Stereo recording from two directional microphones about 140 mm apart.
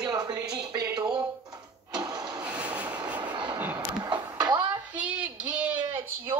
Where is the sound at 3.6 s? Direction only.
15° right (ahead or behind).